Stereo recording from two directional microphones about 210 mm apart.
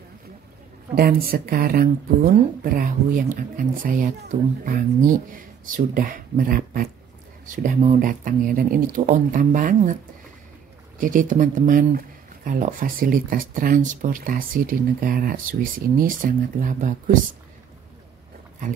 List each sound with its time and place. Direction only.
0.9 s speech: 45° right (ahead or behind)
11.0 s speech: 40° right (ahead or behind)